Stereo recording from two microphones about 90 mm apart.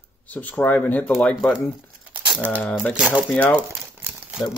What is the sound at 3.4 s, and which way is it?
Speech, 20° left (ahead or behind).